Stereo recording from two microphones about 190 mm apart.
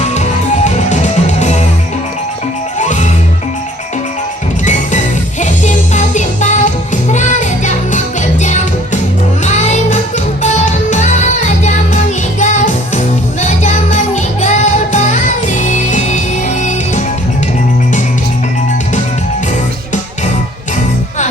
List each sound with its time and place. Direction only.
0.0 s music: 35° left (ahead or behind)
2.7 s music: 40° left (ahead or behind)
4.6 s music: 40° left (ahead or behind)